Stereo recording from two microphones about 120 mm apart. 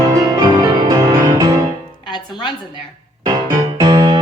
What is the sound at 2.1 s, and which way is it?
Speech, 40° left (ahead or behind).